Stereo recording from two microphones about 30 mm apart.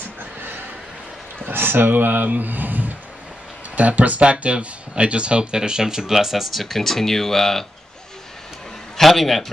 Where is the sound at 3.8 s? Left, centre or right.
Right.